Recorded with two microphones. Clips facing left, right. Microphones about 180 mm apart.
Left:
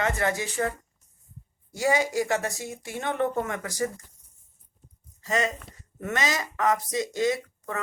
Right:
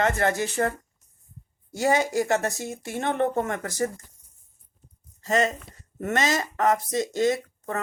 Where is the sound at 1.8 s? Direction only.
50° right (ahead or behind).